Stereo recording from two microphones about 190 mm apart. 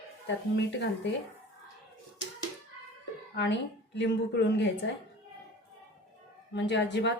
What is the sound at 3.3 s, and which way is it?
A woman's voice, 65° left (ahead or behind).